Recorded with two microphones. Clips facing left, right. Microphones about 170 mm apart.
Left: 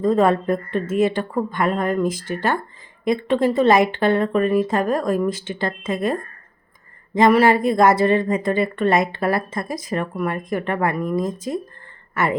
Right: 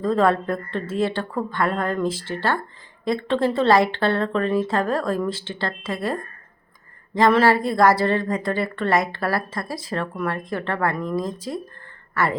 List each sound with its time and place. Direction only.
0.0 s a woman's voice: 20° left (ahead or behind)
7.2 s a woman's voice: 15° left (ahead or behind)